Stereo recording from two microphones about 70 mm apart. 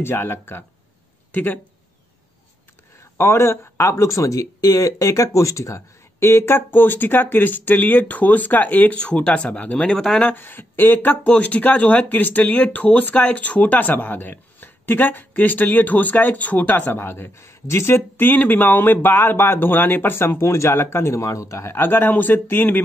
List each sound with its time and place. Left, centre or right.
0.0 s speech: left
3.2 s speech: left
8.9 s speech: centre
9.9 s speech: centre
10.2 s speech: left
21.7 s speech: left